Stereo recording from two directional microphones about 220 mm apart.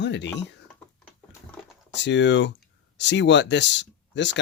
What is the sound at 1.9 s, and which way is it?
Speech, 55° left (ahead or behind).